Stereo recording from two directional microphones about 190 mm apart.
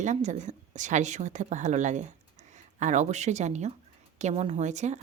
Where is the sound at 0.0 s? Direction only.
40° right (ahead or behind).